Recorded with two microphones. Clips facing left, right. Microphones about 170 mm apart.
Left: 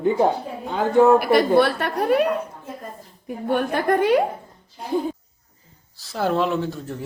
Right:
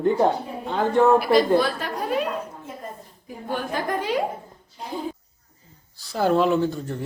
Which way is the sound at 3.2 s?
60° left (ahead or behind).